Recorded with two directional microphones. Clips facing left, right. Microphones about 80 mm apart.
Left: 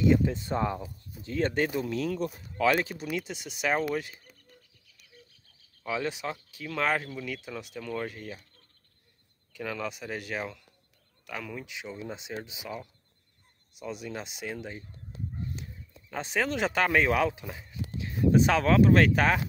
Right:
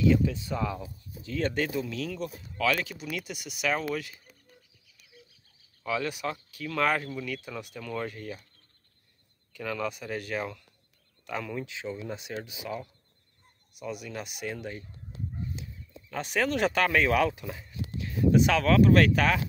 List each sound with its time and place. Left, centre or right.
0.0 s speech: left
2.0 s speech: left
4.8 s bird: centre
5.9 s speech: left
9.5 s speech: centre
11.3 s speech: centre
13.7 s speech: left
16.1 s speech: left